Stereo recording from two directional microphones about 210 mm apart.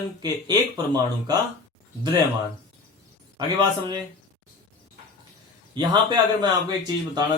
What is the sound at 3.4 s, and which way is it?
Speech, 20° right (ahead or behind).